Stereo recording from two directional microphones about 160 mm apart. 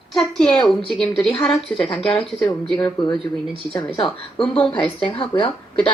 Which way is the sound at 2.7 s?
30° left (ahead or behind).